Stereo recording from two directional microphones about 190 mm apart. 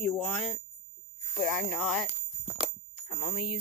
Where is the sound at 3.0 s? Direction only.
30° left (ahead or behind).